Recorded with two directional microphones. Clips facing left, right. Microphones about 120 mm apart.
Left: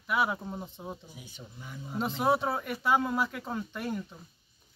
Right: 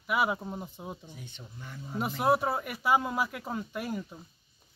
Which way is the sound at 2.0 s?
10° right (ahead or behind).